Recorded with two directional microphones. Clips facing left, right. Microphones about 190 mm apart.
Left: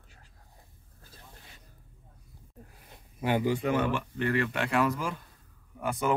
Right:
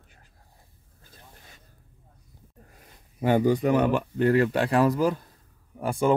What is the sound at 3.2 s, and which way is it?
Speech, 45° right (ahead or behind).